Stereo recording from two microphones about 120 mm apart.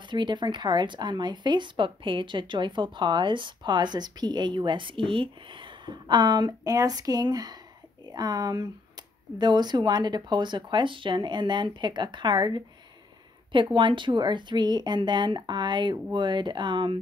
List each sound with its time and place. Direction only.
0.0 s speech: 40° right (ahead or behind)